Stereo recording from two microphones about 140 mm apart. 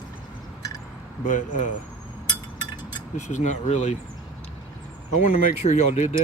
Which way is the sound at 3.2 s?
60° left (ahead or behind).